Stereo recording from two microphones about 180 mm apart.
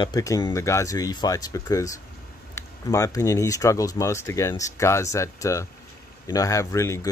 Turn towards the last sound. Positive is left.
turn(degrees=15)  # may be behind; listen again after turning